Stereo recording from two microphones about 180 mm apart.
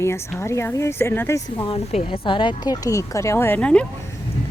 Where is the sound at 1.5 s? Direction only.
30° left (ahead or behind); by 3.8 s 5° left (ahead or behind).